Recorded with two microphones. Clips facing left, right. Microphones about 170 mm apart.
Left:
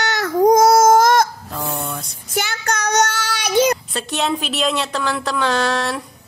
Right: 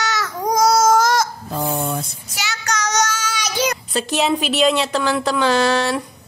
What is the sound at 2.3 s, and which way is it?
Child singing, 50° left (ahead or behind).